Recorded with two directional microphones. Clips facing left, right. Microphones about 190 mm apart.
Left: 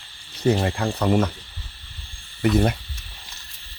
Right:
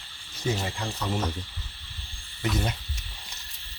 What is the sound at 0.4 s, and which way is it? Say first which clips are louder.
Speech: left 9 dB; 65° left (ahead or behind).